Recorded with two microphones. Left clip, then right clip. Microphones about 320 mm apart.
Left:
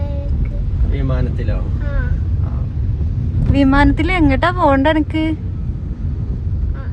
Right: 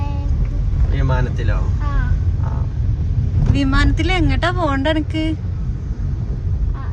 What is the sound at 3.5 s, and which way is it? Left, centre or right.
Speech, centre.